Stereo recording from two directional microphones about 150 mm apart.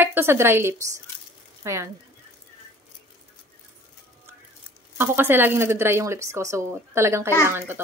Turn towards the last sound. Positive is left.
turn(degrees=-15)  # may be behind; listen again after turning